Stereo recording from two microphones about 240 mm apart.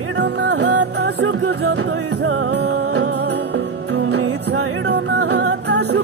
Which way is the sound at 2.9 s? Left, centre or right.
Right.